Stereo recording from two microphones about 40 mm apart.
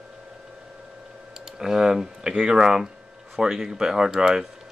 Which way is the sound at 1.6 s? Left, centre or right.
Centre.